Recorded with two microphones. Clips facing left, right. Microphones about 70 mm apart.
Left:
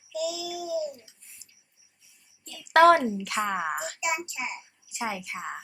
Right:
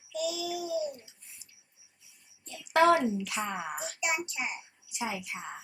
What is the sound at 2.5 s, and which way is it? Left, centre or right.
A child's voice, left.